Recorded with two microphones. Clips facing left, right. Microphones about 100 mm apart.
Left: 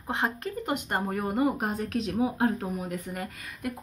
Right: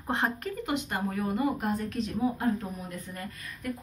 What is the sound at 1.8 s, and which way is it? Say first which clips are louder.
Speech: left 2 dB; 80° left.